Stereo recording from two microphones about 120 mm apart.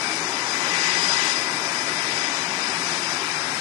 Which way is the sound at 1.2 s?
60° right (ahead or behind).